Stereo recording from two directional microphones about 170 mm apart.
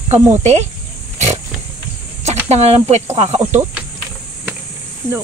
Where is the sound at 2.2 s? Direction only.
40° right (ahead or behind).